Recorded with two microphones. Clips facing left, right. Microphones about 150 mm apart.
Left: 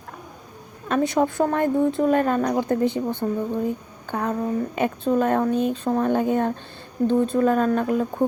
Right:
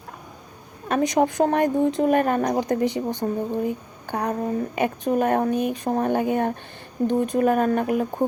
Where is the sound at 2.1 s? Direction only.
55° right (ahead or behind).